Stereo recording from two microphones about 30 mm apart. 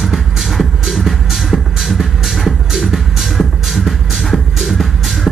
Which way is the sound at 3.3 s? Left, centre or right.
Centre.